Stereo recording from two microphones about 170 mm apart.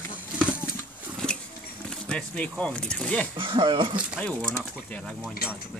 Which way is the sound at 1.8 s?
5° left (ahead or behind).